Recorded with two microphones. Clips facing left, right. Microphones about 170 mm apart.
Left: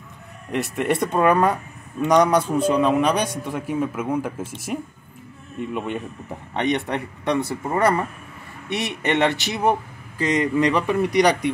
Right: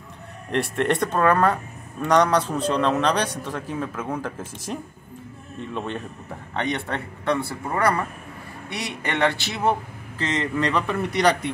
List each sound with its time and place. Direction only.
0.5 s speech: 5° left (ahead or behind)